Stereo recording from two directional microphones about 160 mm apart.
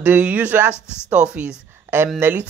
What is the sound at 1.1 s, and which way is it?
A woman's voice, 5° right (ahead or behind).